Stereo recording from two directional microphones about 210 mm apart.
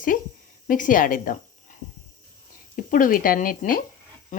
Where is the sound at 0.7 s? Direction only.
40° left (ahead or behind).